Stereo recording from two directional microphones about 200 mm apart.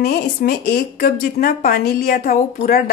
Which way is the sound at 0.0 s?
50° left (ahead or behind).